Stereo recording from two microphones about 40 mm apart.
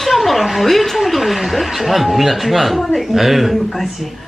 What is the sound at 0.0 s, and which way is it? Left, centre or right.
A woman's voice, centre.